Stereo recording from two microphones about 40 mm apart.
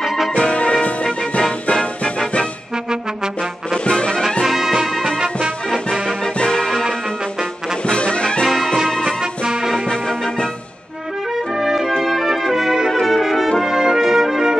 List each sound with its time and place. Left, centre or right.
0.3 s music: left
3.8 s music: left
4.5 s music: centre
4.7 s music: centre
6.4 s music: centre
7.8 s music: left
9.2 s music: centre
11.6 s music: centre
13.0 s brass instrument: centre